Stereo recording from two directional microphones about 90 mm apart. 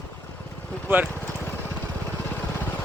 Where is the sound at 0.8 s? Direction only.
20° right (ahead or behind).